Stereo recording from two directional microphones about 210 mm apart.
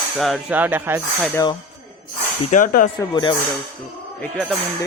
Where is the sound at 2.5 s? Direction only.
40° left (ahead or behind).